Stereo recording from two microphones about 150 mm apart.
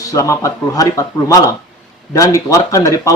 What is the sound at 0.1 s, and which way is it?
Speech, 20° left (ahead or behind).